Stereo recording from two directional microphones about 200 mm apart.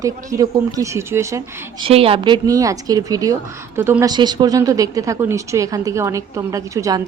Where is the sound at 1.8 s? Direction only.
30° right (ahead or behind).